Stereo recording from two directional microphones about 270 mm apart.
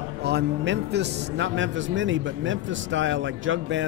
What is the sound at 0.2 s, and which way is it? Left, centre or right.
A man's voice, right.